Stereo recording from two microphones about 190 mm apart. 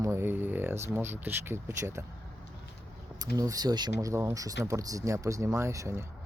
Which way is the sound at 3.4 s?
20° right (ahead or behind).